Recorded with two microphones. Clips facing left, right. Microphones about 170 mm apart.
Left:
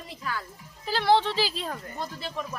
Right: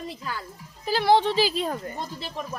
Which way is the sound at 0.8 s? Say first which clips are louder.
Right 3 dB; 10° right (ahead or behind).